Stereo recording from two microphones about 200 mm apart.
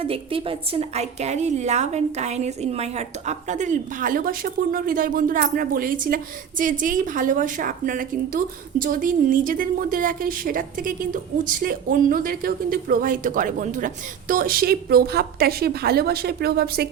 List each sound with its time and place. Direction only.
0.0 s a woman's voice: 25° right (ahead or behind); by 16.9 s 50° right (ahead or behind)